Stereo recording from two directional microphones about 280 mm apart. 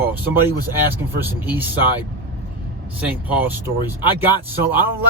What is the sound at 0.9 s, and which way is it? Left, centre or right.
Speech, centre.